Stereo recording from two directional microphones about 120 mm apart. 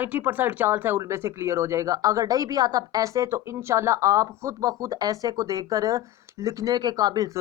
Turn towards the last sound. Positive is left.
turn(degrees=-35)  # may be behind; listen again after turning